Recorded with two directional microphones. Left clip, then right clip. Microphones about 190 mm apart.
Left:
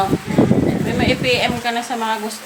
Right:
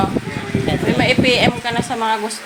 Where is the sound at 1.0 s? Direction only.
15° right (ahead or behind).